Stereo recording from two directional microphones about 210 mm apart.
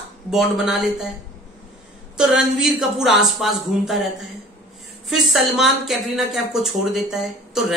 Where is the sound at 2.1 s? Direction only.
5° right (ahead or behind).